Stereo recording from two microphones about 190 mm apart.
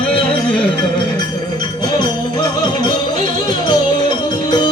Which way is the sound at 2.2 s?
20° left (ahead or behind).